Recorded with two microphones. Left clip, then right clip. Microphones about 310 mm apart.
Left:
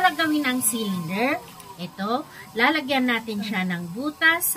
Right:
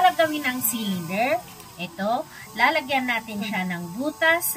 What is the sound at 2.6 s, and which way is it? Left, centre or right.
Speech, left.